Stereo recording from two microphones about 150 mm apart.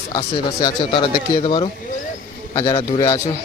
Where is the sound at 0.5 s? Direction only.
30° left (ahead or behind).